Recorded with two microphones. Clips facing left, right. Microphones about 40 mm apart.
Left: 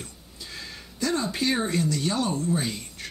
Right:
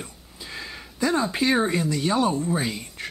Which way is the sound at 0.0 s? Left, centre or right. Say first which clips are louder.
Right 3 dB; centre.